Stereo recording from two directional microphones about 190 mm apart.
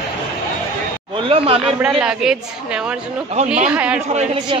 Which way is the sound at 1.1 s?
30° right (ahead or behind).